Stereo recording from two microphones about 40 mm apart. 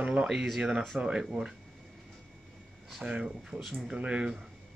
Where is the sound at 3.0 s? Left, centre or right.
Centre.